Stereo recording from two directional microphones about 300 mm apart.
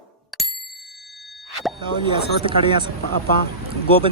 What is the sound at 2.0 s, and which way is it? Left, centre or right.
Speech, centre.